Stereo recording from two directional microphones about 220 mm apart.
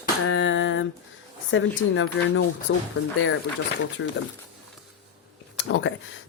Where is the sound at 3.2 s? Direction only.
60° left (ahead or behind).